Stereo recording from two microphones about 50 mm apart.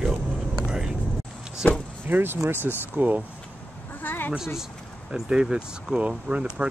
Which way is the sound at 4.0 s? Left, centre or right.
Left.